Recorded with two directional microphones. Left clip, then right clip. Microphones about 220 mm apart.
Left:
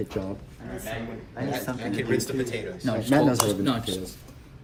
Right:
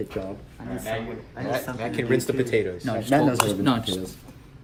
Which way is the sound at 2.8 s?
10° left (ahead or behind).